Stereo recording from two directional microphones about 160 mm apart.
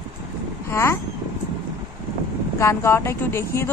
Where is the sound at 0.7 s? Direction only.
15° left (ahead or behind).